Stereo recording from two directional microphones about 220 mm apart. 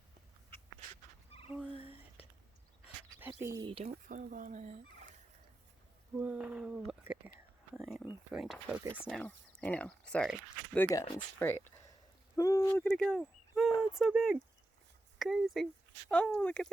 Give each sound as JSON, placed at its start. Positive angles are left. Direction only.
{"t": 1.5, "sound": "frog", "side_deg": -5}
{"t": 1.7, "sound": "whispering", "side_deg": 25}
{"t": 3.2, "sound": "speech", "side_deg": -10}
{"t": 6.1, "sound": "speech", "side_deg": -5}
{"t": 10.8, "sound": "speech", "side_deg": 15}
{"t": 13.5, "sound": "a sound", "side_deg": 0}
{"t": 13.9, "sound": "speech", "side_deg": 0}